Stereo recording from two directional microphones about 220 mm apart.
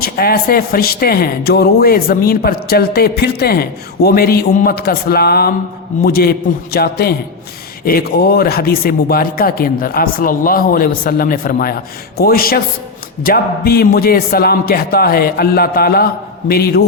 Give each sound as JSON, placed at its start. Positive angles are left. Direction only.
{"t": 0.0, "sound": "speech", "side_deg": 45}